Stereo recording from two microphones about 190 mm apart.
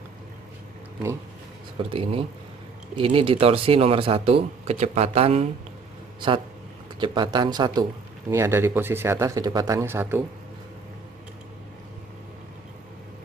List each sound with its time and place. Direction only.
1.9 s speech: 30° right (ahead or behind)
7.0 s speech: 25° right (ahead or behind)